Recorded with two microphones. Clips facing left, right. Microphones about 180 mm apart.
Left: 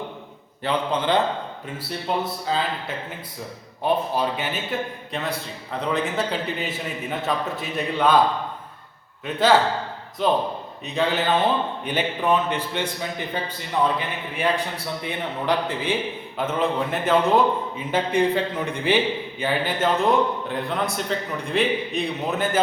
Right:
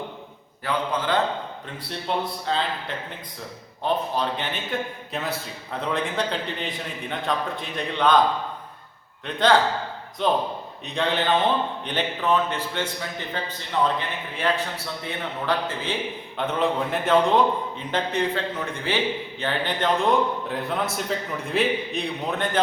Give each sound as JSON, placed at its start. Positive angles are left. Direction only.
{"t": 0.6, "sound": "speech", "side_deg": 20}
{"t": 1.9, "sound": "a man's voice", "side_deg": 5}
{"t": 3.8, "sound": "a man's voice", "side_deg": 10}
{"t": 9.2, "sound": "a man's voice", "side_deg": 5}
{"t": 16.4, "sound": "a man's voice", "side_deg": 0}